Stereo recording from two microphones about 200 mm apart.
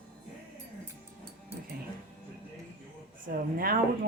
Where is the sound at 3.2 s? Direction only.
45° right (ahead or behind).